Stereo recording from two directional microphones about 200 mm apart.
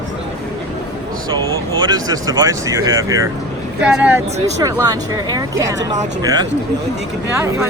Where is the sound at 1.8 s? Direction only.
20° right (ahead or behind).